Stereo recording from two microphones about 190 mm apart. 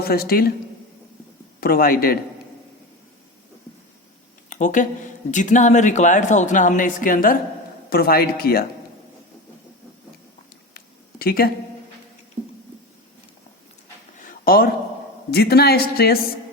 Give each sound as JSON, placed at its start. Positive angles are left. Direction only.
{"t": 0.0, "sound": "speech", "side_deg": 55}
{"t": 1.6, "sound": "speech", "side_deg": 50}
{"t": 4.4, "sound": "speech", "side_deg": 40}
{"t": 10.8, "sound": "a sound", "side_deg": 50}
{"t": 14.2, "sound": "a sound", "side_deg": 45}
{"t": 15.3, "sound": "speech", "side_deg": 55}